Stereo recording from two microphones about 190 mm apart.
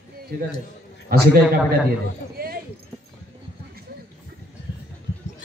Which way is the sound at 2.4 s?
50° right (ahead or behind).